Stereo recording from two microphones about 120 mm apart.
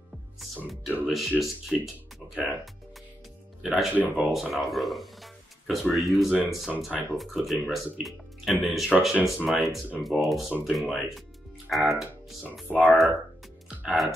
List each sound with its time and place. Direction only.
0.7 s speech: centre (ahead or behind)
3.9 s speech: 15° right (ahead or behind)
4.3 s speech: centre (ahead or behind)